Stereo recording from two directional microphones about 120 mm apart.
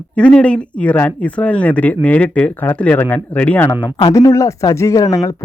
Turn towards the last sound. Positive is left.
turn(degrees=25)  # may be behind; listen again after turning